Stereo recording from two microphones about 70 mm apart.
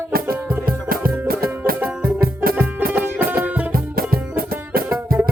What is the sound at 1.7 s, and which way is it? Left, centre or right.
Music, centre.